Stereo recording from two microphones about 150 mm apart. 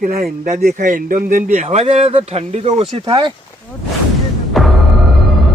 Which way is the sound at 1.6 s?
40° right (ahead or behind).